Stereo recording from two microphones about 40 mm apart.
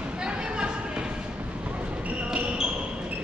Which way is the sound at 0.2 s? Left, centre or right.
Right.